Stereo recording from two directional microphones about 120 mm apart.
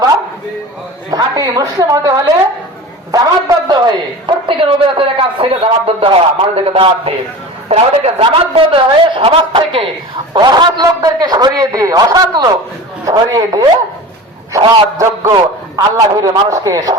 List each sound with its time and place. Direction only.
1.1 s a man's voice: 30° right (ahead or behind)
4.3 s a woman's voice: 45° right (ahead or behind)